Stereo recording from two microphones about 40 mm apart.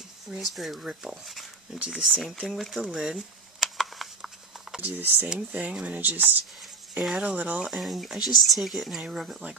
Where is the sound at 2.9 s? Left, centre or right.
Centre.